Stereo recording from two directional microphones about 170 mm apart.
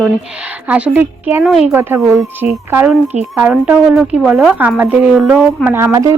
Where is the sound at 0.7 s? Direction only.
10° right (ahead or behind).